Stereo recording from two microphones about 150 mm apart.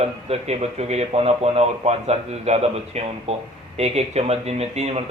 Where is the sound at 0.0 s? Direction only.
40° right (ahead or behind).